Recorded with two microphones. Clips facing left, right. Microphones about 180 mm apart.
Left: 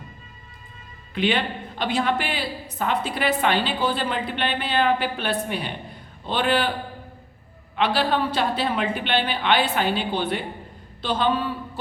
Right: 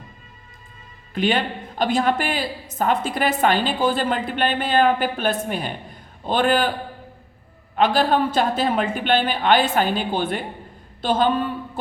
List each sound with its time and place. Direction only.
1.1 s a woman's voice: 45° right (ahead or behind)
7.8 s a woman's voice: 45° right (ahead or behind)